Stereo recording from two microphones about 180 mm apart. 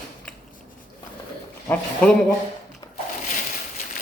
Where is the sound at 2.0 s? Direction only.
5° left (ahead or behind).